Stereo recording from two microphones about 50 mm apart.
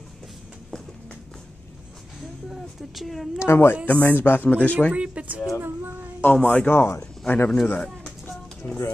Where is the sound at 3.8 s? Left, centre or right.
Left.